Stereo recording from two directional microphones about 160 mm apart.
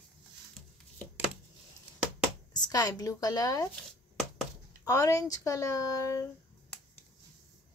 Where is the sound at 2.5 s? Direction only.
25° left (ahead or behind).